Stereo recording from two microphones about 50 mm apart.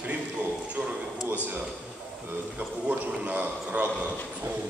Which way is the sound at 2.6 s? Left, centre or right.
Right.